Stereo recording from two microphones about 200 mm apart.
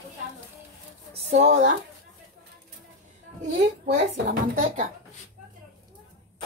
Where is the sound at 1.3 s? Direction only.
35° right (ahead or behind).